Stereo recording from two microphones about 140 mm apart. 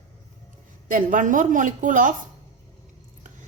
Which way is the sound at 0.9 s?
70° right (ahead or behind).